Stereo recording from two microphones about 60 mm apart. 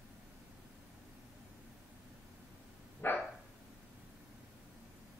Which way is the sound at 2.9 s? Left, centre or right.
Left.